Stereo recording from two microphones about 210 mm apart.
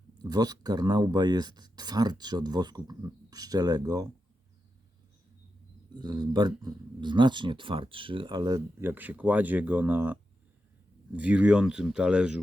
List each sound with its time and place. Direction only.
0.2 s speech: 20° right (ahead or behind)
5.9 s speech: 20° right (ahead or behind); by 12.4 s 5° right (ahead or behind)